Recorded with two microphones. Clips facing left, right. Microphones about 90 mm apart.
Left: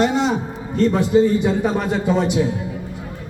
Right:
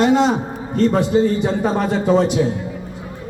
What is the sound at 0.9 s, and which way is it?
A man's voice, 35° right (ahead or behind).